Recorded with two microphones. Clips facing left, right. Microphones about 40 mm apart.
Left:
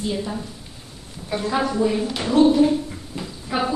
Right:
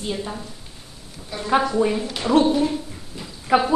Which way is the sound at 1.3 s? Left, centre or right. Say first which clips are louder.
Left 6 dB; left.